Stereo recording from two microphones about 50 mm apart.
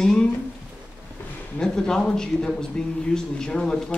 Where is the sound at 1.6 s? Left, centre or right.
Centre.